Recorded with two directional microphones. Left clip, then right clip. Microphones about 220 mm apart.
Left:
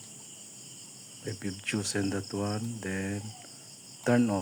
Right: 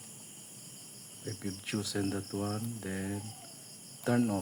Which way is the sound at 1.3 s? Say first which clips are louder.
Left 5 dB; 15° left (ahead or behind).